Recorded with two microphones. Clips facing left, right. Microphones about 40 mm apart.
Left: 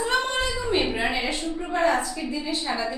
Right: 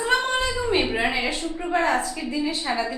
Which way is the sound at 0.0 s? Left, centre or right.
Centre.